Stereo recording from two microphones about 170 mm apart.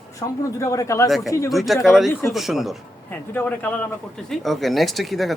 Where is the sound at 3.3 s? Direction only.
10° left (ahead or behind).